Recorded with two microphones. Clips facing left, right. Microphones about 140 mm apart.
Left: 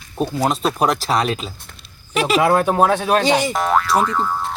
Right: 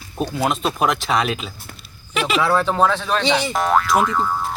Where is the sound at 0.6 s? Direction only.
Centre (ahead or behind).